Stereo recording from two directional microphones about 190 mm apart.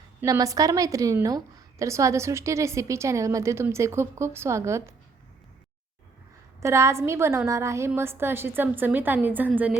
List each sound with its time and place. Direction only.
0.2 s a woman's voice: 15° right (ahead or behind)
6.6 s a woman's voice: 15° right (ahead or behind)